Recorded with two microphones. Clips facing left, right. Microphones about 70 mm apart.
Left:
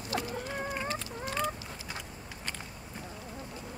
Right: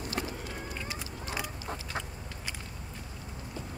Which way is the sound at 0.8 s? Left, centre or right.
Centre.